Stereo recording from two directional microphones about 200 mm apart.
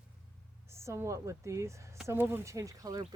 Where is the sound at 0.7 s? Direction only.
15° right (ahead or behind).